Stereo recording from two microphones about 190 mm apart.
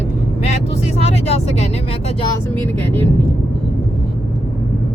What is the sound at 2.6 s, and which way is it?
Speech, 10° left (ahead or behind).